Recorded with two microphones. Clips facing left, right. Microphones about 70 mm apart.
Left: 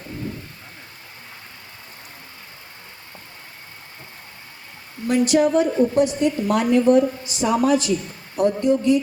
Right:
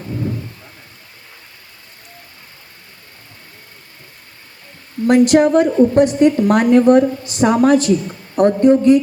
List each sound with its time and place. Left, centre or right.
5.0 s a woman's voice: right